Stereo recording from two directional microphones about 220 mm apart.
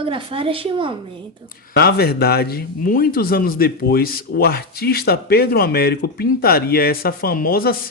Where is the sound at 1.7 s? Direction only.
45° left (ahead or behind).